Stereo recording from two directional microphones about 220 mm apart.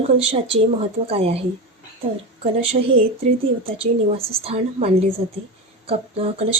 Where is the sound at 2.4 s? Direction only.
25° right (ahead or behind).